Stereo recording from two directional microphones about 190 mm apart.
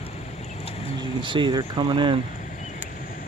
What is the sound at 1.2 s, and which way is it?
Speech, 25° right (ahead or behind).